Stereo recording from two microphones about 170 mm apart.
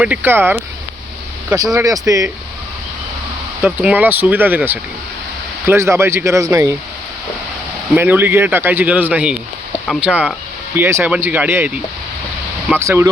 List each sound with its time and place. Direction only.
0.0 s speech: 10° right (ahead or behind)
3.6 s speech: 10° right (ahead or behind)
7.9 s speech: 10° right (ahead or behind)